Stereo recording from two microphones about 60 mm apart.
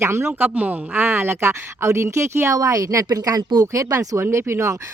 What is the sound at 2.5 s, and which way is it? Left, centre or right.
Speech, right.